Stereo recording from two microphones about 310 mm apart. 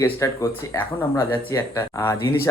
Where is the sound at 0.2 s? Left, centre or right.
Centre.